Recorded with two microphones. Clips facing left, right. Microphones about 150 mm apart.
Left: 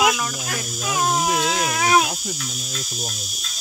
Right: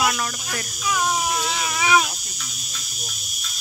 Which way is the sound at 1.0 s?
55° left (ahead or behind).